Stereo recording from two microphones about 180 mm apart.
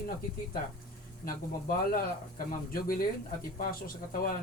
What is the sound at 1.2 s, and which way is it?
Speech, 55° left (ahead or behind).